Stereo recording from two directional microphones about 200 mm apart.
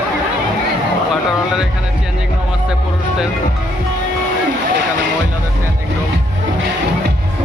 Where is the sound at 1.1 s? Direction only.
5° right (ahead or behind).